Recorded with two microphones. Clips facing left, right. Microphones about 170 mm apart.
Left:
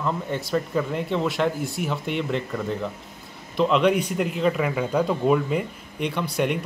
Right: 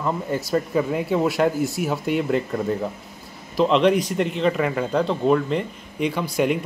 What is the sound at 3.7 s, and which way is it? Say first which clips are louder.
Speech: right 2 dB; 5° left (ahead or behind).